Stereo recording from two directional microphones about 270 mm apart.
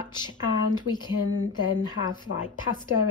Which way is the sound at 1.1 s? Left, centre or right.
Left.